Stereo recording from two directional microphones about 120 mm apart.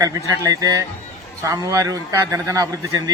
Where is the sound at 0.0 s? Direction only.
30° right (ahead or behind).